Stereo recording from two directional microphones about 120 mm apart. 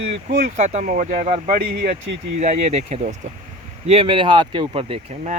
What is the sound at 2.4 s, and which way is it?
Speech, 70° right (ahead or behind).